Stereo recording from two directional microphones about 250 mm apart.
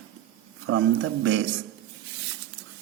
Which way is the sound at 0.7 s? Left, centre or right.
Right.